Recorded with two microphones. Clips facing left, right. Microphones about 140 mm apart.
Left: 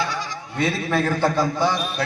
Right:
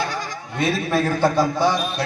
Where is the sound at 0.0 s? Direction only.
45° right (ahead or behind).